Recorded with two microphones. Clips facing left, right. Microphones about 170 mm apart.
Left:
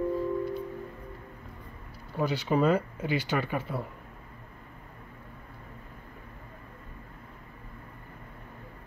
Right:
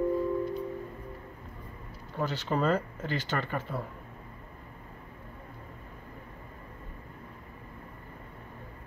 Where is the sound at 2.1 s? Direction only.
15° left (ahead or behind).